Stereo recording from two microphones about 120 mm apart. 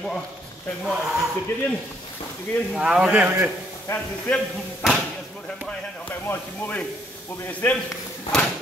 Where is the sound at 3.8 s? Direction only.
20° left (ahead or behind).